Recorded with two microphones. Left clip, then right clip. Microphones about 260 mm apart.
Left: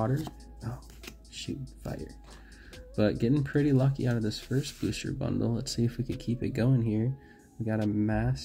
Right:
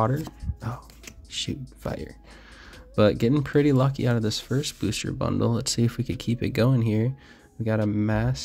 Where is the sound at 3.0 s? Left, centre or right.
Right.